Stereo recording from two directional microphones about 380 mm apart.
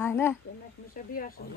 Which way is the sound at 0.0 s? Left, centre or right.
Centre.